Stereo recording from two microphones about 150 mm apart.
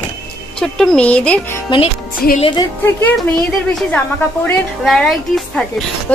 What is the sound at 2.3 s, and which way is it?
Speech, 35° left (ahead or behind).